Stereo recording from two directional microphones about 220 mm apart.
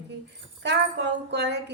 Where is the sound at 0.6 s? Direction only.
50° right (ahead or behind).